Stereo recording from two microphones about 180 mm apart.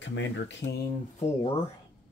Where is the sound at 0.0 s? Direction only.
90° left.